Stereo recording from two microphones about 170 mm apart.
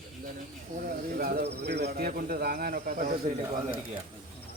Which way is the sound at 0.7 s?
50° right (ahead or behind).